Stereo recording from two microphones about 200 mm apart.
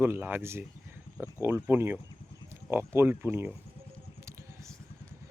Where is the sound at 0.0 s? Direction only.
10° right (ahead or behind).